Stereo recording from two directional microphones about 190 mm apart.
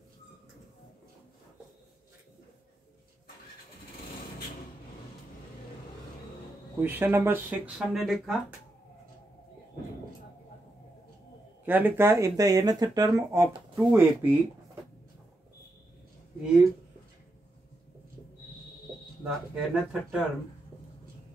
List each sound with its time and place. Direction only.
6.8 s speech: 10° right (ahead or behind)
11.6 s speech: 10° right (ahead or behind)
19.2 s speech: 5° right (ahead or behind)